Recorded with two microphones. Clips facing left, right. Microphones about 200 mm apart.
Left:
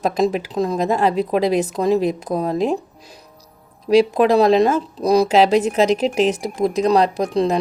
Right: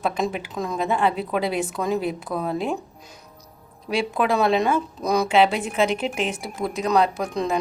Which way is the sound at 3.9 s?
40° left (ahead or behind).